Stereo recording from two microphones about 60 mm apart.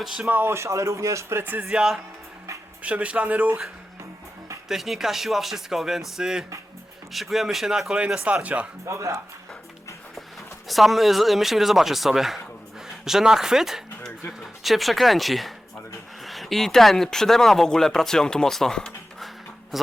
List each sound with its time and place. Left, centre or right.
0.0 s speech: centre
0.3 s speech: right
0.5 s speech: right
1.7 s speech: centre
2.8 s speech: right
4.7 s speech: centre
7.9 s speech: centre
8.9 s speech: right
10.7 s speech: centre
19.7 s speech: centre